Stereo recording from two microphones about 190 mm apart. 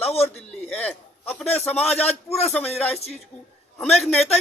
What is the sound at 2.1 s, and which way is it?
Speech, 35° left (ahead or behind).